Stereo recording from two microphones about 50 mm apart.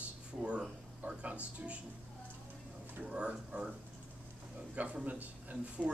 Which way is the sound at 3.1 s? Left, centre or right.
Centre.